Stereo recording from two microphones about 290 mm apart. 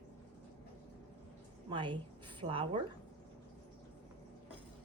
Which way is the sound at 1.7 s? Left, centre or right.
Centre.